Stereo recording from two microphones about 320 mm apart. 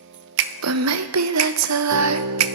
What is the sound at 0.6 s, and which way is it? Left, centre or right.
Music, right.